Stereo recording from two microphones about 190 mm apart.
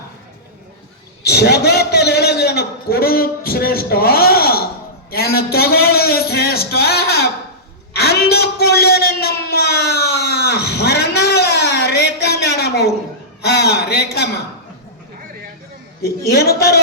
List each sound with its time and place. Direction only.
1.2 s a man's voice: 60° left (ahead or behind)
7.9 s a sound: 55° left (ahead or behind)
16.0 s a man's voice: 55° left (ahead or behind)